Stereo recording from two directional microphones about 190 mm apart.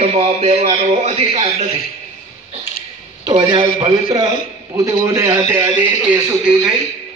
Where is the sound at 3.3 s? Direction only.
25° right (ahead or behind); by 6.7 s 5° right (ahead or behind).